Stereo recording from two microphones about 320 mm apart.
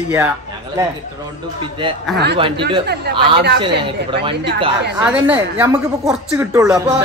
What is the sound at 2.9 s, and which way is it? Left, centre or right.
Speech, right.